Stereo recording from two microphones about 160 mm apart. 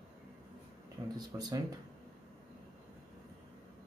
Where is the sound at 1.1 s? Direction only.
25° right (ahead or behind).